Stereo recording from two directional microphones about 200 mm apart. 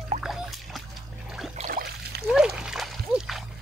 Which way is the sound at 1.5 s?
35° right (ahead or behind).